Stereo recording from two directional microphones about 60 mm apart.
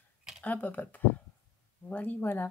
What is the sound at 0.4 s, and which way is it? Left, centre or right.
Speech, left.